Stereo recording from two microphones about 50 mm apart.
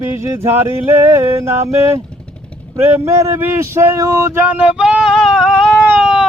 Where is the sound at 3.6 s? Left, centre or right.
Right.